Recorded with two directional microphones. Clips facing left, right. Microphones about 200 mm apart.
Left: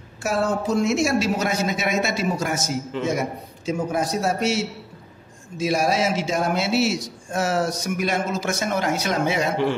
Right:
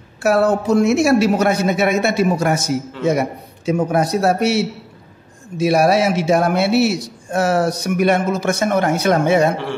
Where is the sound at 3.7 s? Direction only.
65° right (ahead or behind).